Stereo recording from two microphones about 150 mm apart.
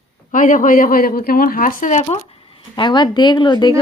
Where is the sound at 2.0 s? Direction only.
40° left (ahead or behind).